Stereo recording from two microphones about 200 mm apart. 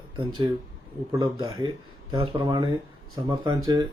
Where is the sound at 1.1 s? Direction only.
20° right (ahead or behind).